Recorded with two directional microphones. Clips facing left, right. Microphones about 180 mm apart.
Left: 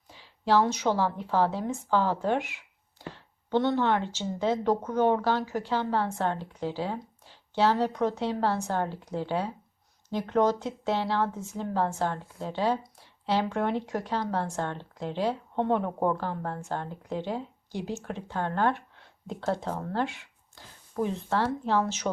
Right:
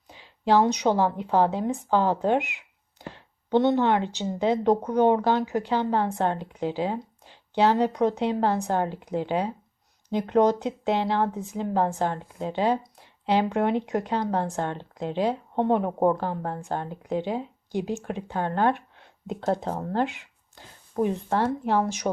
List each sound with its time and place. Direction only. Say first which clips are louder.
0.1 s a woman's voice: right 3 dB; 15° right (ahead or behind)